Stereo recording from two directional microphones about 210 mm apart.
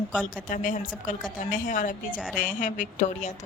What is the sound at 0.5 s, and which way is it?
A woman's voice, 40° left (ahead or behind).